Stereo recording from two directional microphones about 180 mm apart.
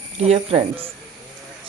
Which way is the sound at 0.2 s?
35° right (ahead or behind).